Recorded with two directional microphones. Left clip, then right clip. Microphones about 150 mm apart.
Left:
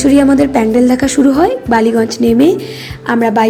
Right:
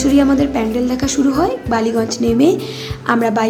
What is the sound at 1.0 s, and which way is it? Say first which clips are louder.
A woman's voice: left 5 dB; 25° left (ahead or behind).